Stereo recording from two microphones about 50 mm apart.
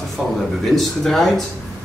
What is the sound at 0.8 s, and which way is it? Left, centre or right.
Speech, centre.